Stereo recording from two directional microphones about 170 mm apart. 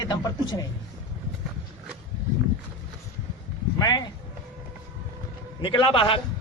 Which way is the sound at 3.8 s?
25° left (ahead or behind).